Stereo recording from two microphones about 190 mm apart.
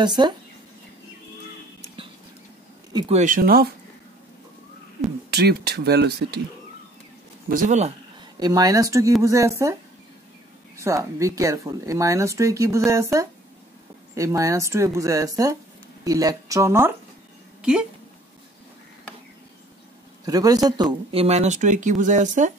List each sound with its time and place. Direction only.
0.0 s speech: 25° right (ahead or behind)
3.1 s speech: 40° right (ahead or behind)
5.3 s speech: 55° right (ahead or behind)
7.4 s speech: 45° right (ahead or behind)
8.4 s speech: 20° right (ahead or behind)
10.8 s speech: 15° right (ahead or behind)
17.6 s a sound: 5° right (ahead or behind)
20.2 s speech: 20° right (ahead or behind); by 22.5 s 40° right (ahead or behind)